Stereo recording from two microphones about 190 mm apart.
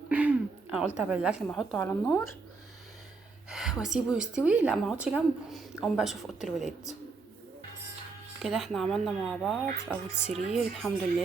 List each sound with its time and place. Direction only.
0.1 s a sound: 10° right (ahead or behind)
1.5 s a woman's voice: centre (ahead or behind)
1.8 s speech: 15° left (ahead or behind)
3.5 s a woman's voice: centre (ahead or behind)
8.4 s a woman's voice: centre (ahead or behind)